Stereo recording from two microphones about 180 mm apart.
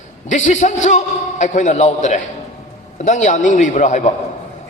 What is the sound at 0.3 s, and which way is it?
A man's voice, 40° left (ahead or behind).